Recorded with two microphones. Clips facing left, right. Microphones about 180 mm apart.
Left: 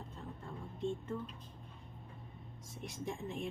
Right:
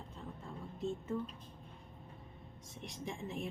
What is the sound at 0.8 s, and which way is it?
Speech, 5° right (ahead or behind).